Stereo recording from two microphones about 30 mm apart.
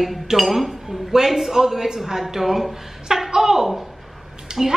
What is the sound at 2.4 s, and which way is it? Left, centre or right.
Speech, centre.